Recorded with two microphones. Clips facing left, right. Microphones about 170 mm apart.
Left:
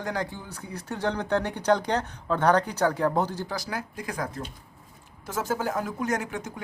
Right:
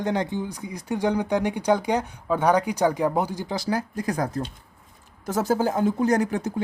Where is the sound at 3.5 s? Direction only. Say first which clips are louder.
Right 7 dB; 30° right (ahead or behind).